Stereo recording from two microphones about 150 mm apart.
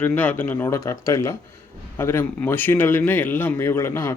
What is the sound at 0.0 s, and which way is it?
Speech, 10° left (ahead or behind).